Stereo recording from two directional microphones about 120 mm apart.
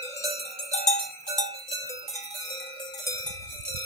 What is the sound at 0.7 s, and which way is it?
Cowbell, 70° left (ahead or behind).